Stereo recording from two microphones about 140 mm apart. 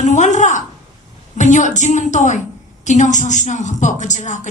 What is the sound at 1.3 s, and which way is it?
A woman's voice, 60° left (ahead or behind).